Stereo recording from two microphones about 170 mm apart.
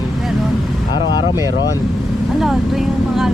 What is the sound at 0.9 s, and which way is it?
Speech, 25° left (ahead or behind).